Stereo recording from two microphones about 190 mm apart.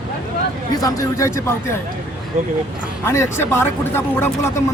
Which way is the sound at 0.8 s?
20° left (ahead or behind).